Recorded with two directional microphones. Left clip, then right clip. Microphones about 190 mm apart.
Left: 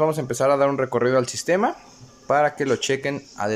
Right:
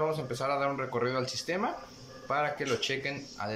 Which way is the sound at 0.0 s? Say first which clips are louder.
Left 11 dB; 45° left (ahead or behind).